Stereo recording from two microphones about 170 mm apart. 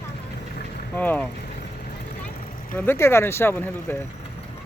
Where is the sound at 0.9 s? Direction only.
10° left (ahead or behind).